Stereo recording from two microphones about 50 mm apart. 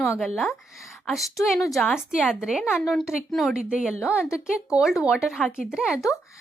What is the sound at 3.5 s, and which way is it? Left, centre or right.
A woman's voice, centre.